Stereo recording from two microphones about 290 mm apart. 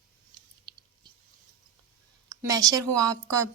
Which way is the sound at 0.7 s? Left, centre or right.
Centre.